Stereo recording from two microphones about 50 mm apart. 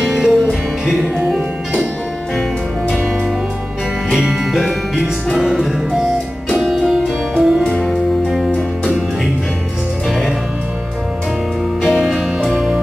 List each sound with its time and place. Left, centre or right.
0.0 s music: centre
4.1 s music: centre
6.5 s music: centre
6.8 s music: centre
10.0 s music: centre
12.0 s music: centre